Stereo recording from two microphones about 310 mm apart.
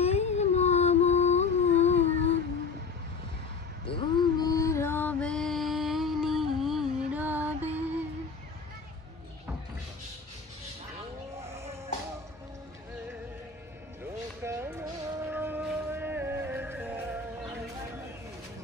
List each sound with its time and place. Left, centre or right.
0.0 s music: left
3.8 s mantra: centre
11.4 s a sound: centre
14.4 s music: centre